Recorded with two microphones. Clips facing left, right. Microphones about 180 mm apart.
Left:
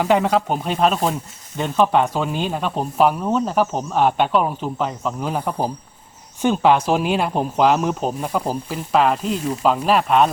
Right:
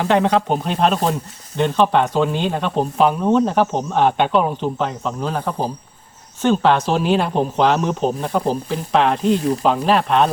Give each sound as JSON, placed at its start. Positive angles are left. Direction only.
{"t": 0.0, "sound": "speech", "side_deg": 5}
{"t": 9.3, "sound": "speech", "side_deg": -40}
{"t": 9.6, "sound": "speech", "side_deg": 5}